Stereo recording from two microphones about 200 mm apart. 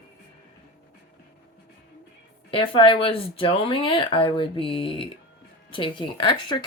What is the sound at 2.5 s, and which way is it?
Speech, 25° left (ahead or behind).